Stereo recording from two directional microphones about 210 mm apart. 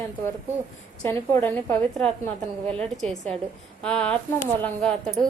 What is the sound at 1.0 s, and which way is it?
A woman's voice, 10° left (ahead or behind).